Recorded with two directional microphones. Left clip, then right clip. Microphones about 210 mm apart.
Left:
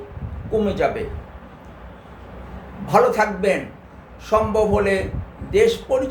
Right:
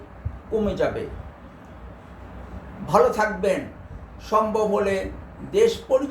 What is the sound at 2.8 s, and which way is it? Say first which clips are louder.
Speech: left 3 dB; 20° left (ahead or behind).